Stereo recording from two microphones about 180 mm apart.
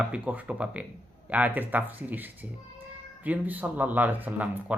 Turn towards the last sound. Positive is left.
turn(degrees=-10)  # may be behind; listen again after turning